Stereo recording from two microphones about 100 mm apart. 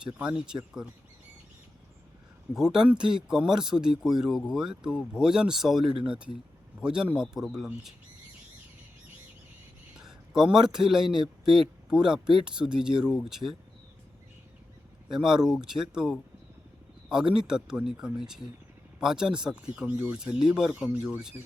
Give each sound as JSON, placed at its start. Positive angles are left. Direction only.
{"t": 0.0, "sound": "speech", "side_deg": -10}
{"t": 2.7, "sound": "speech", "side_deg": -10}
{"t": 10.0, "sound": "a man's voice", "side_deg": -5}
{"t": 15.1, "sound": "speech", "side_deg": -5}